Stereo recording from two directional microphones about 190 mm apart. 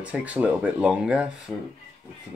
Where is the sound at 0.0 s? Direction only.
5° right (ahead or behind).